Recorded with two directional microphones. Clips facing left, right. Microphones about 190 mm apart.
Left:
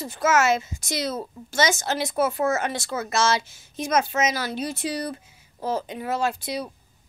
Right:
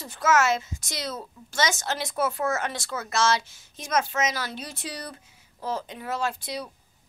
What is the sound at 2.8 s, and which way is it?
Speech, 25° left (ahead or behind).